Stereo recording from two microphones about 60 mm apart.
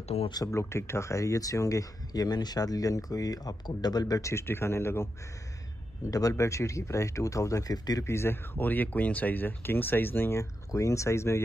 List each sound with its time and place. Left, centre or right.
0.5 s speech: left
4.3 s a man's voice: left
6.0 s speech: left
6.3 s speech: left
8.0 s speech: left
10.7 s speech: left